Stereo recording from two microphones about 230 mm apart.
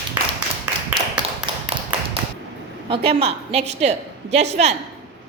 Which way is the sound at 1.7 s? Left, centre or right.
Right.